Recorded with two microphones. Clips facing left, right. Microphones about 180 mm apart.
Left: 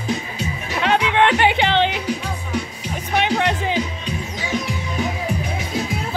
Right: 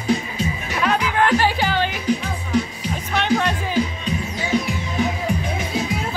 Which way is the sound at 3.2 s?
20° left (ahead or behind).